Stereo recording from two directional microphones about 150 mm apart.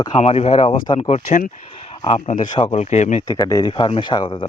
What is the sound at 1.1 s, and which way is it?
Speech, 55° left (ahead or behind).